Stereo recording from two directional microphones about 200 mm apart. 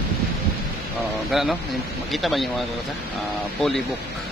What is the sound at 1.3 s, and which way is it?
Speech, centre (ahead or behind).